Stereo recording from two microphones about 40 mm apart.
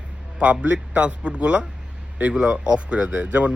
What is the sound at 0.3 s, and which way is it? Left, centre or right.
A man's voice, right.